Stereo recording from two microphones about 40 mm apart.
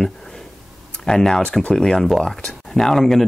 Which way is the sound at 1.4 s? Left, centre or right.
Left.